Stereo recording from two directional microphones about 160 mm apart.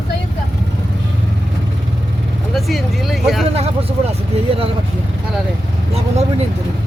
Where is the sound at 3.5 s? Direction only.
40° right (ahead or behind).